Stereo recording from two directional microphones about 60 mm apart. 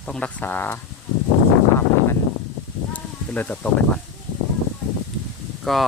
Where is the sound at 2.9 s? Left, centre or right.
Left.